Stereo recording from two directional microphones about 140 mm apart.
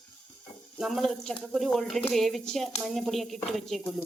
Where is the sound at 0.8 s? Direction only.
Centre (ahead or behind).